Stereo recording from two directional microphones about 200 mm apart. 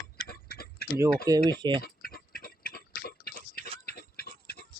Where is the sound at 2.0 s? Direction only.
50° left (ahead or behind).